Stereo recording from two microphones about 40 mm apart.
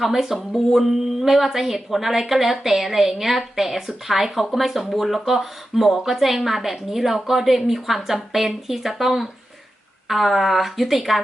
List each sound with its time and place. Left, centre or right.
0.0 s speech: centre
0.3 s speech: centre